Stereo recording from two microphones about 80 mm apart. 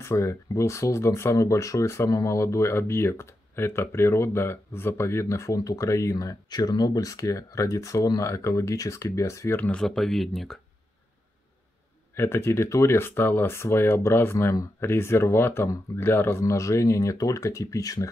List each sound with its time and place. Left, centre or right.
0.0 s speech: left
9.6 s speech: centre
9.8 s speech: centre
12.2 s speech: left